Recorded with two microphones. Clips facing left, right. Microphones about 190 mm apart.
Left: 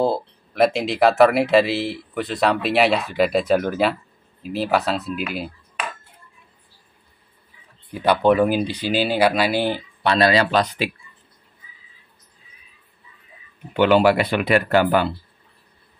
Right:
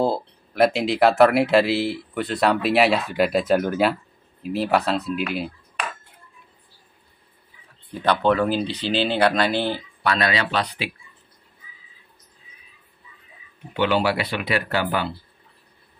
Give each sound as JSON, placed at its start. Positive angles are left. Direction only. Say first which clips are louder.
{"t": 0.0, "sound": "speech", "louder": "left 1 dB", "side_deg": 0}
{"t": 7.9, "sound": "speech", "louder": "left 3 dB", "side_deg": 10}
{"t": 10.0, "sound": "speech", "louder": "left 5 dB", "side_deg": 30}
{"t": 13.7, "sound": "speech", "louder": "left 6 dB", "side_deg": 50}